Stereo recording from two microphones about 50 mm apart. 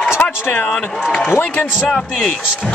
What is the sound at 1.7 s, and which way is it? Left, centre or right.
Speech, centre.